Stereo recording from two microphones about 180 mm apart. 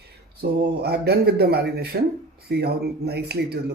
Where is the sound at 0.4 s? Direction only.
65° right (ahead or behind).